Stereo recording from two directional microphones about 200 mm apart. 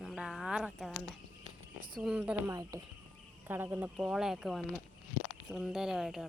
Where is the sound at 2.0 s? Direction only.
5° right (ahead or behind).